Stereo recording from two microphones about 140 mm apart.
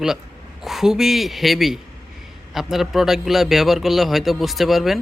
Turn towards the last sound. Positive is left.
turn(degrees=0)  # may be behind; listen again after turning